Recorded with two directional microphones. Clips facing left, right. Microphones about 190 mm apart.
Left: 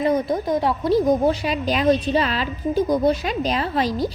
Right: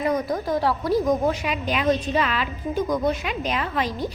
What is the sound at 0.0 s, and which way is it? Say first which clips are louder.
A woman's voice: left 3 dB; 25° left (ahead or behind).